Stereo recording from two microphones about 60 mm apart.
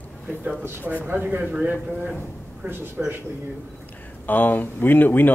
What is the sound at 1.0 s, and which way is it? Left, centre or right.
Speech, right.